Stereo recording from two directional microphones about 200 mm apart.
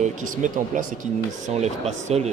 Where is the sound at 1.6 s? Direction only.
35° right (ahead or behind).